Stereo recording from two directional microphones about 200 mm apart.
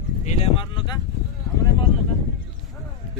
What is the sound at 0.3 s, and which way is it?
Speech, 30° left (ahead or behind).